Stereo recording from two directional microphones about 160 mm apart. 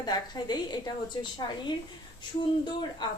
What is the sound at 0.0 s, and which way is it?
A woman's voice, 25° left (ahead or behind).